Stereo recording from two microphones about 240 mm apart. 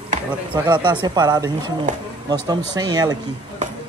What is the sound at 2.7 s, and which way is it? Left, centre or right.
Speech, centre.